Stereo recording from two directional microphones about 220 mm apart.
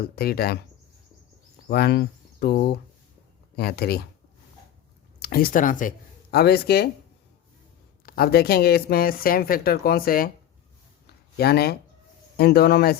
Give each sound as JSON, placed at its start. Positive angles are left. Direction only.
{"t": 0.0, "sound": "a woman's voice", "side_deg": 45}
{"t": 1.7, "sound": "a woman's voice", "side_deg": 45}
{"t": 5.2, "sound": "a woman's voice", "side_deg": 40}
{"t": 8.0, "sound": "a woman's voice", "side_deg": 45}
{"t": 11.0, "sound": "a sound", "side_deg": 45}
{"t": 12.4, "sound": "a woman's voice", "side_deg": 45}